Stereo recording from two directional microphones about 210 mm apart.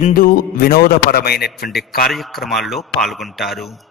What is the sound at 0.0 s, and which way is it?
A man's voice, 40° left (ahead or behind).